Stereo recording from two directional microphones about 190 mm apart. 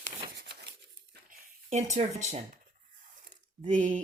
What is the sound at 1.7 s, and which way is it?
Speech, 35° right (ahead or behind).